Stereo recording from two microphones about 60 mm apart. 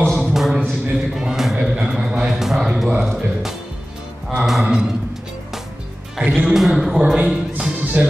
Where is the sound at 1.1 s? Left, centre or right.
Centre.